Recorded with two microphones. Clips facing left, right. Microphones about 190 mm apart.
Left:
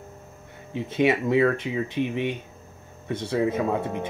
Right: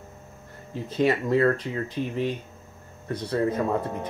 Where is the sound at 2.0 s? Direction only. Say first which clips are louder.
Left 2 dB; 70° left (ahead or behind).